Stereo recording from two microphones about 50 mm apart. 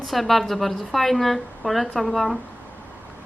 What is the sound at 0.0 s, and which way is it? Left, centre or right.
Speech, centre.